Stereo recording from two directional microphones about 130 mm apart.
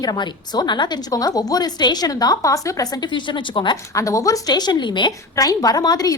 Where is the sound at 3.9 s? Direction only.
25° left (ahead or behind).